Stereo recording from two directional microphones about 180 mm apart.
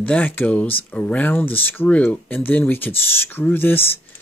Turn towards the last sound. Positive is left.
turn(degrees=10)  # may be behind; listen again after turning